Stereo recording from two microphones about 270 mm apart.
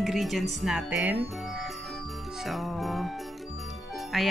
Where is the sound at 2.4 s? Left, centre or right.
Centre.